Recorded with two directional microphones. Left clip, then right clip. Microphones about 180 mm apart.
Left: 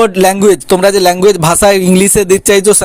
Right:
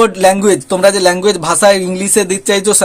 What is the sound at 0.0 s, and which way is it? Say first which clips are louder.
Music: left 2 dB; 40° left (ahead or behind).